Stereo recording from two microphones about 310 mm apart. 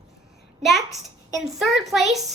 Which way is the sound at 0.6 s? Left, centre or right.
Centre.